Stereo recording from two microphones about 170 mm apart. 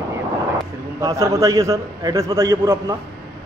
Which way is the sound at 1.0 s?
20° right (ahead or behind).